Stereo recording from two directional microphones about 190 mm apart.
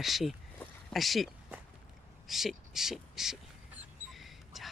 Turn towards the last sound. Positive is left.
turn(degrees=0)  # may be behind; listen again after turning